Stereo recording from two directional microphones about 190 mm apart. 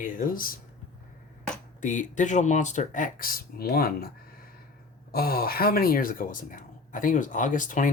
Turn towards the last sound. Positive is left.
turn(degrees=45)  # may be behind; listen again after turning